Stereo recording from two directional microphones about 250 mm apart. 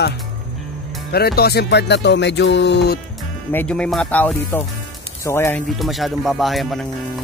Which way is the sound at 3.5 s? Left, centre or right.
Centre.